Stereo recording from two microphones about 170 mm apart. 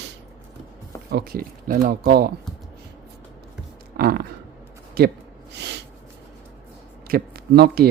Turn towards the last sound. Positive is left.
turn(degrees=-65)  # may be behind; listen again after turning